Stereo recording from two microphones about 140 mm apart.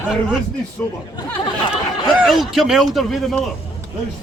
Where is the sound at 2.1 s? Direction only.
Centre (ahead or behind).